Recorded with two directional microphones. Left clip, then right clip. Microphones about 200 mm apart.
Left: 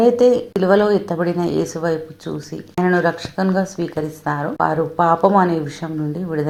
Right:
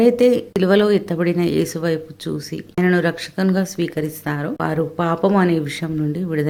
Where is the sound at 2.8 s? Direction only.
30° right (ahead or behind).